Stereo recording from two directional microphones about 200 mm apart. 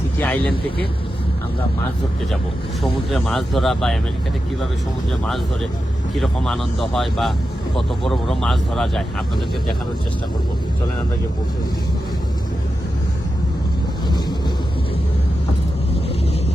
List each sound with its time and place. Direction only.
0.2 s speech: 10° left (ahead or behind)
2.8 s speech: centre (ahead or behind)
6.1 s speech: centre (ahead or behind)